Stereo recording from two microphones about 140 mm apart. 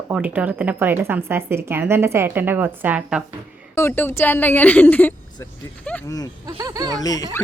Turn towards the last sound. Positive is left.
turn(degrees=25)  # may be behind; listen again after turning